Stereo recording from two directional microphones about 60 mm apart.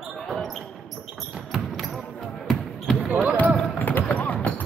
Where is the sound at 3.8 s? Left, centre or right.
Left.